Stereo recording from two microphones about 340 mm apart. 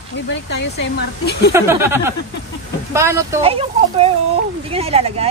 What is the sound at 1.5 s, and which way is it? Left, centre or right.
Speech, centre.